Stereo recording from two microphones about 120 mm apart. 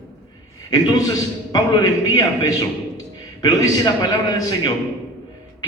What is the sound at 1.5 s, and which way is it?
A man's voice, 30° left (ahead or behind).